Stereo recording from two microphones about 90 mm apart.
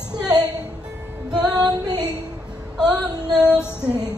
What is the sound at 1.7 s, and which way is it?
Female singing, 45° right (ahead or behind).